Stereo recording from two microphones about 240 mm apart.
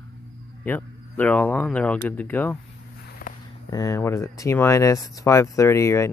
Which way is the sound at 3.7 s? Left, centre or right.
Centre.